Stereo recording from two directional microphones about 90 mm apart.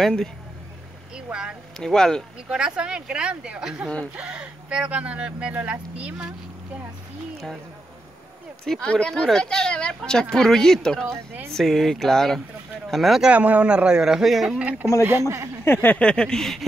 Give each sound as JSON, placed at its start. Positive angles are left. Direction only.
{"t": 0.0, "sound": "speech", "side_deg": 5}
{"t": 1.1, "sound": "vehicle", "side_deg": -10}
{"t": 1.8, "sound": "speech", "side_deg": 5}
{"t": 2.5, "sound": "speech", "side_deg": -10}
{"t": 8.8, "sound": "speech", "side_deg": 10}
{"t": 13.3, "sound": "speech", "side_deg": -15}
{"t": 14.6, "sound": "speech", "side_deg": -15}
{"t": 15.0, "sound": "speech", "side_deg": -30}
{"t": 15.6, "sound": "speech", "side_deg": 25}